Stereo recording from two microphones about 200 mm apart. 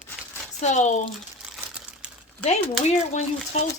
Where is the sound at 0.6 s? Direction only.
35° left (ahead or behind).